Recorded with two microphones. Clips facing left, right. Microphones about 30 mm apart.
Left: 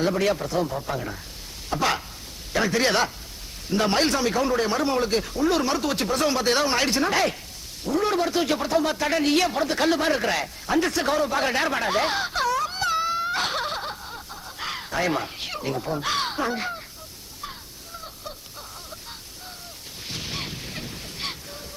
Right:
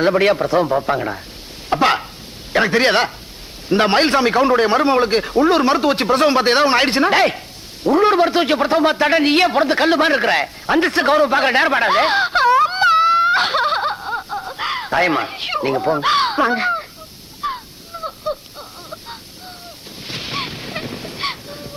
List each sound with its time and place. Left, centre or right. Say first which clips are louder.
0.0 s a man's voice: right 8 dB; right
1.7 s chopping: right 9 dB; right
2.5 s a man's voice: right 7 dB; right
17.4 s a sound: right 14 dB; right
20.1 s ocean: right 7 dB; right